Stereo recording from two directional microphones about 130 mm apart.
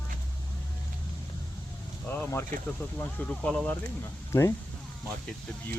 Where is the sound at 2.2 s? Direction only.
20° left (ahead or behind).